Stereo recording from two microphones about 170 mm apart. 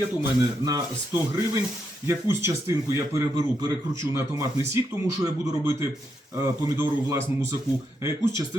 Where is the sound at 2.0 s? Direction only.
15° right (ahead or behind).